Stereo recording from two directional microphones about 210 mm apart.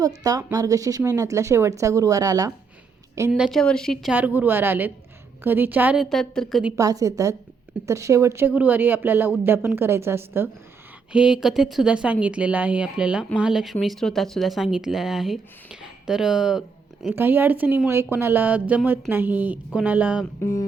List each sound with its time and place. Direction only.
0.2 s speech: 15° right (ahead or behind); by 6.7 s centre (ahead or behind)
6.7 s speech: 15° right (ahead or behind)
20.4 s music: 15° left (ahead or behind)